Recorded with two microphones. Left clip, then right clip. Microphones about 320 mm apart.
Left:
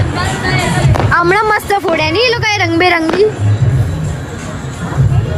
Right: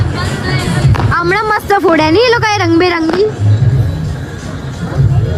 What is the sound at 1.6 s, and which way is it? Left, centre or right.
Speech, right.